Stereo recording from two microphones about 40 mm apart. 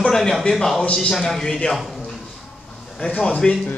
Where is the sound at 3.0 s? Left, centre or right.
Left.